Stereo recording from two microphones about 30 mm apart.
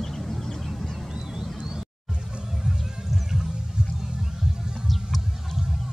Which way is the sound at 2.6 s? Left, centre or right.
Centre.